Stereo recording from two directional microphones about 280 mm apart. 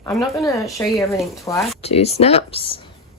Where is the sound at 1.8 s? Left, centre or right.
Left.